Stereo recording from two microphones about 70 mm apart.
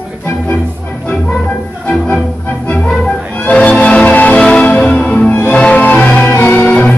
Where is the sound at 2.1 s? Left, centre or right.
Centre.